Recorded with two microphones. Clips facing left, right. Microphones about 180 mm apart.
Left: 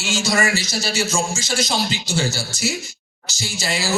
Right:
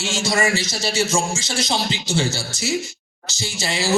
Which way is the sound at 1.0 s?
30° right (ahead or behind).